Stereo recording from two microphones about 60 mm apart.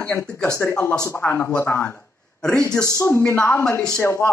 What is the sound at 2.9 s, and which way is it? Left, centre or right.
A man's voice, left.